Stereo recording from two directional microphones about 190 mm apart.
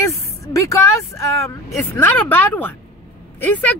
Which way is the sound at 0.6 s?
15° left (ahead or behind).